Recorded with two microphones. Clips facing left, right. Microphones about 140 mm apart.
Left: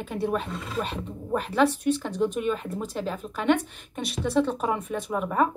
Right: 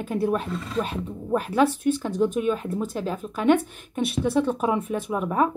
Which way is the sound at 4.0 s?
5° right (ahead or behind).